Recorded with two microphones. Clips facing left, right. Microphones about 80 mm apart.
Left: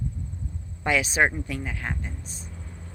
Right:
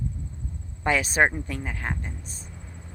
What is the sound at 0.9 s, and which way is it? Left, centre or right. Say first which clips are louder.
Speech: right 1 dB; right.